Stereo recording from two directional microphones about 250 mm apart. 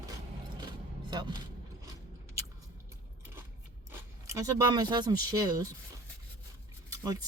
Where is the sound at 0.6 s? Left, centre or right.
Centre.